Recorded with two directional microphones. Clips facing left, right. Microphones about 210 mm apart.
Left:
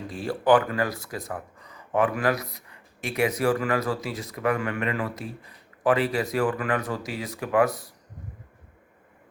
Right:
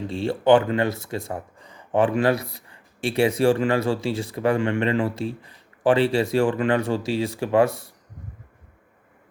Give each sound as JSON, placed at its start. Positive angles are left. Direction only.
{"t": 0.1, "sound": "speech", "side_deg": -25}